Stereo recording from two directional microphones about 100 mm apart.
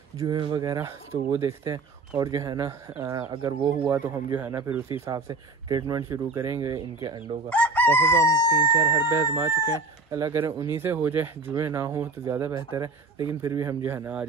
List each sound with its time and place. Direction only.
0.3 s speech: 50° right (ahead or behind)
0.7 s a man's voice: 30° right (ahead or behind)
3.3 s speech: 50° right (ahead or behind)
3.9 s speech: 20° right (ahead or behind)
5.1 s a man's voice: 40° right (ahead or behind)
7.4 s chicken: 15° left (ahead or behind)
8.3 s speech: 40° left (ahead or behind)
9.1 s speech: 30° right (ahead or behind)
10.1 s a man's voice: 40° right (ahead or behind)
10.7 s speech: 20° right (ahead or behind)
13.8 s speech: 20° right (ahead or behind)